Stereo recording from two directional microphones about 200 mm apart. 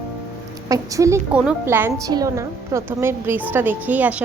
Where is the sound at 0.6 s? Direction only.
15° right (ahead or behind).